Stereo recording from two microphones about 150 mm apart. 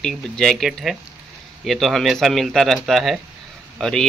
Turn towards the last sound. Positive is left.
turn(degrees=5)  # may be behind; listen again after turning